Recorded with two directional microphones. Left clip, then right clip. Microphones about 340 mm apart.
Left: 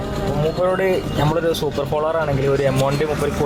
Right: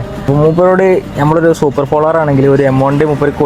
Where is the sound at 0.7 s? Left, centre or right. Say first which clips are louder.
Right 9 dB; right.